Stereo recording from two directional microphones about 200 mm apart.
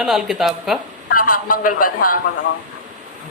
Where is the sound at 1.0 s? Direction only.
45° left (ahead or behind).